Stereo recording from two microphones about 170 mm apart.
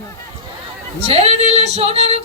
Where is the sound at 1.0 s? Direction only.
35° right (ahead or behind).